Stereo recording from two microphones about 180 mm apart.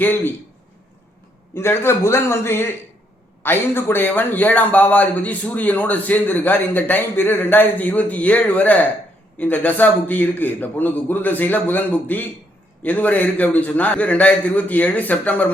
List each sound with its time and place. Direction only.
0.0 s a man's voice: 10° left (ahead or behind)
1.5 s a man's voice: 15° left (ahead or behind)